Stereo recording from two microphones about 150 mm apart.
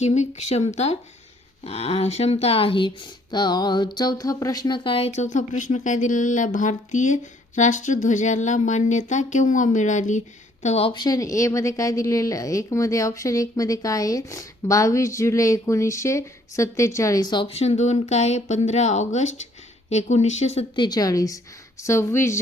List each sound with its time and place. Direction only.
0.0 s speech: 50° left (ahead or behind)
20.7 s a woman's voice: 30° left (ahead or behind)